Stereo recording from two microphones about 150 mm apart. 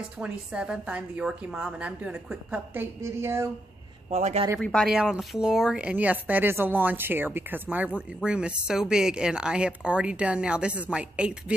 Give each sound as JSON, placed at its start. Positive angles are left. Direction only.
{"t": 0.2, "sound": "speech", "side_deg": -5}
{"t": 4.1, "sound": "speech", "side_deg": -45}
{"t": 4.6, "sound": "speech", "side_deg": 5}